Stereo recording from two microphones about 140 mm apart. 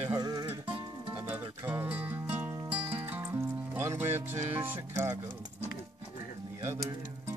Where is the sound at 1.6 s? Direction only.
10° right (ahead or behind).